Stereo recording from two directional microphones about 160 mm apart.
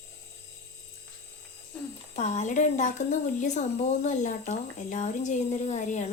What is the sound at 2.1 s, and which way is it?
A woman's voice, 45° left (ahead or behind).